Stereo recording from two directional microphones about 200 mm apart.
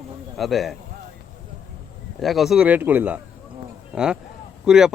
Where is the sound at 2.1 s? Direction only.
Centre (ahead or behind).